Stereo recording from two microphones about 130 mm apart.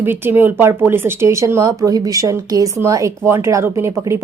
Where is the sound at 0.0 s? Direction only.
15° right (ahead or behind).